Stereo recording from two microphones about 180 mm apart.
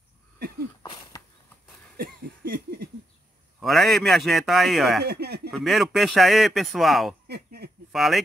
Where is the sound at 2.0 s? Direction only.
60° right (ahead or behind).